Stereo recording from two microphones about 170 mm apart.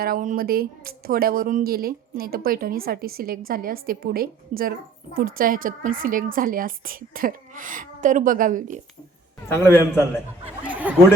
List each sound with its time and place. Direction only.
0.0 s a woman's voice: 55° right (ahead or behind)
9.6 s a man's voice: 15° left (ahead or behind)
10.7 s a sound: 10° right (ahead or behind)